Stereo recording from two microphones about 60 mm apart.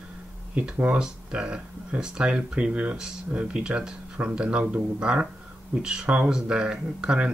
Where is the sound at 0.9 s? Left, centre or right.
Centre.